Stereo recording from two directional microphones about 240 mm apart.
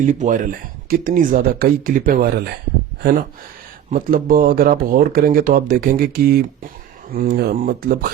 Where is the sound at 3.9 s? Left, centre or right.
Right.